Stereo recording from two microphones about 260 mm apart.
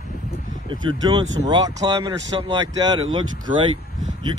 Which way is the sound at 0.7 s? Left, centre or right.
Centre.